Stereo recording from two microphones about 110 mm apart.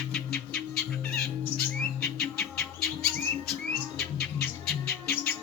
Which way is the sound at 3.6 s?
5° left (ahead or behind).